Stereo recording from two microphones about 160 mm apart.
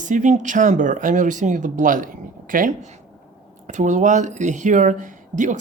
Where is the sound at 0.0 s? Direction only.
50° right (ahead or behind).